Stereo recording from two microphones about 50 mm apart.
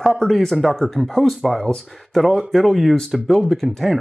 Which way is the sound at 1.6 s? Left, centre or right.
Centre.